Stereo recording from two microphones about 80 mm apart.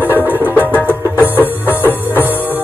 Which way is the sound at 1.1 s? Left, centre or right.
Right.